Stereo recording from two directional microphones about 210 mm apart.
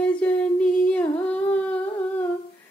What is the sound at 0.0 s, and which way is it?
Humming, 5° left (ahead or behind).